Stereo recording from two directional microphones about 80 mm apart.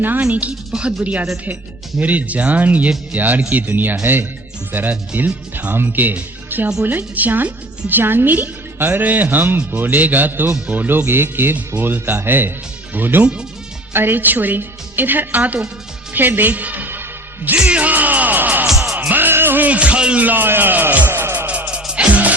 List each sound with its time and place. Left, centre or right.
0.2 s a woman's voice: centre
18.7 s music: centre
18.9 s speech: right
21.1 s music: right